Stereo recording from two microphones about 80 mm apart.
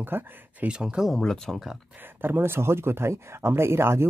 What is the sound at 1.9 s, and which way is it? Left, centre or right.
Speech, right.